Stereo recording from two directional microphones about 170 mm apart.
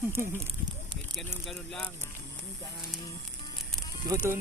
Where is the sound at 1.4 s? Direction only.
5° left (ahead or behind).